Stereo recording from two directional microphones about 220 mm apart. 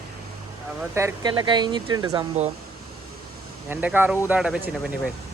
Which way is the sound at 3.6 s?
10° right (ahead or behind).